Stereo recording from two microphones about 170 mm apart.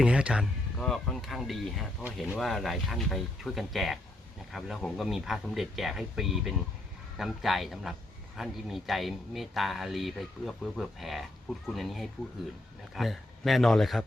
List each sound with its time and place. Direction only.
0.0 s speech: 5° right (ahead or behind)